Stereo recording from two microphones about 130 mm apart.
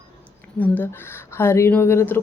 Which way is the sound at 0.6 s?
15° left (ahead or behind).